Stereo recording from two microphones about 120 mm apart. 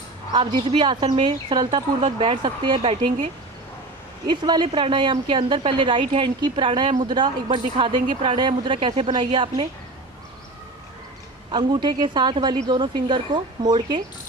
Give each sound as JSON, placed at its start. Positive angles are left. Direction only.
{"t": 0.3, "sound": "speech", "side_deg": -40}
{"t": 2.0, "sound": "speech", "side_deg": -50}
{"t": 4.3, "sound": "speech", "side_deg": -40}
{"t": 11.5, "sound": "speech", "side_deg": -40}